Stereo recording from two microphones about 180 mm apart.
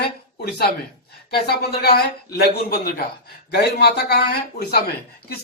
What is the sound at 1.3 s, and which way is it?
A man's voice, 60° left (ahead or behind).